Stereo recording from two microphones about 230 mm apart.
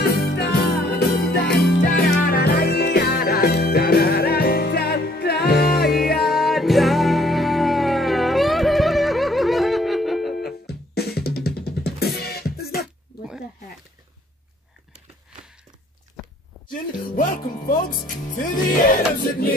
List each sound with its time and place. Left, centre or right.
0.0 s music: left
6.2 s music: centre
10.3 s music: left
16.2 s walk: centre
17.1 s music: left